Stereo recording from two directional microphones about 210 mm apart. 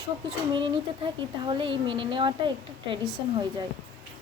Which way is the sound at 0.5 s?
25° right (ahead or behind).